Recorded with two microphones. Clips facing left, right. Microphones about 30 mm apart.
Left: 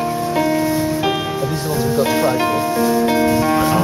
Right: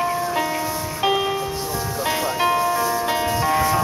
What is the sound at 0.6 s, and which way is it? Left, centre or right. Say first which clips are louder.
Music: left 8 dB; left.